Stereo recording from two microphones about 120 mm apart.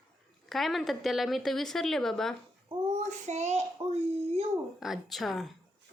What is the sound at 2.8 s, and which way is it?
Child singing, 75° right (ahead or behind).